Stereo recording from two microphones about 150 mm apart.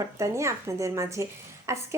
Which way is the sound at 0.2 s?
20° right (ahead or behind).